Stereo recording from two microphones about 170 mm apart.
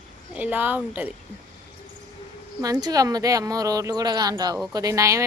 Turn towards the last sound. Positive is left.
turn(degrees=-20)  # may be behind; listen again after turning